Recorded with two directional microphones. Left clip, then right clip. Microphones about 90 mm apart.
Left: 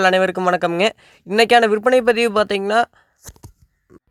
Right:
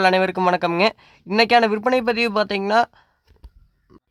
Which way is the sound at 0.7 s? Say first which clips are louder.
Left 1 dB; 30° left (ahead or behind).